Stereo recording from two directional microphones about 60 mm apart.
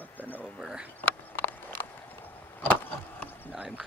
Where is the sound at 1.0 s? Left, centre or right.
Left.